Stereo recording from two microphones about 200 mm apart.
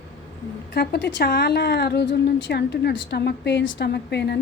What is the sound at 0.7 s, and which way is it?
A woman's voice, 60° left (ahead or behind).